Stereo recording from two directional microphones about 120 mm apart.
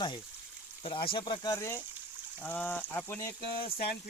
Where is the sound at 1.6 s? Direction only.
20° left (ahead or behind).